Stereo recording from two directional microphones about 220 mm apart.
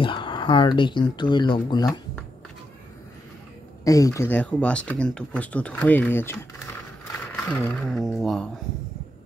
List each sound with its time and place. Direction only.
0.0 s speech: 20° left (ahead or behind)
3.8 s speech: 15° left (ahead or behind)
7.4 s speech: 5° left (ahead or behind)